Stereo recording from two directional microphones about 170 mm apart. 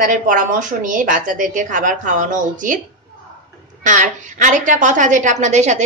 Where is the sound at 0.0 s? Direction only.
50° right (ahead or behind).